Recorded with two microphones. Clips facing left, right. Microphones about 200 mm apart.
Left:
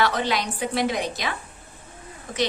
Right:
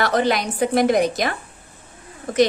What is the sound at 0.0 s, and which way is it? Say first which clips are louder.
A woman's voice: right 4 dB; 45° right (ahead or behind).